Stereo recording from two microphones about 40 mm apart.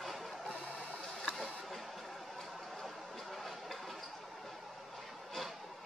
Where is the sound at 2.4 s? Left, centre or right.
Centre.